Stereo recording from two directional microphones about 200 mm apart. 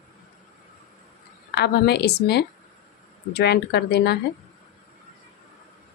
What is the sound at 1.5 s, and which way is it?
Speech, 55° left (ahead or behind).